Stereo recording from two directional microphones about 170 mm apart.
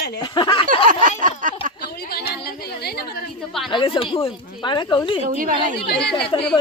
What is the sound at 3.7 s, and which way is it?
Speech, 30° left (ahead or behind).